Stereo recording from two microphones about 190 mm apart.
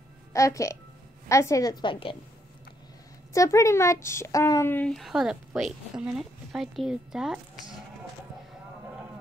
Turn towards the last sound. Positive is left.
turn(degrees=-5)  # may be behind; listen again after turning